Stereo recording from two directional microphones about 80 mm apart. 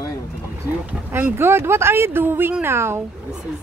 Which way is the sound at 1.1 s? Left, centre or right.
Right.